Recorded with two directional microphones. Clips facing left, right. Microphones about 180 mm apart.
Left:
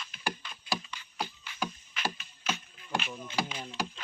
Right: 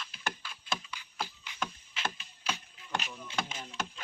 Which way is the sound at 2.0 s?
25° right (ahead or behind).